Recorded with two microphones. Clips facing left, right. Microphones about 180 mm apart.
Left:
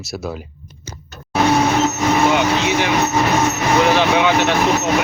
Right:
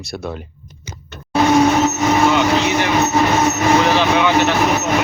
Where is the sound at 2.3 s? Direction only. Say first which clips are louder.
Right 1 dB; 15° left (ahead or behind).